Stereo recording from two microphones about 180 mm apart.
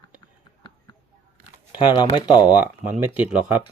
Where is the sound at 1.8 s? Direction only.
25° left (ahead or behind).